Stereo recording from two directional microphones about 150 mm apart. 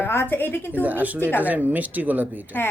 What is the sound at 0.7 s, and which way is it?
Speech, 10° right (ahead or behind).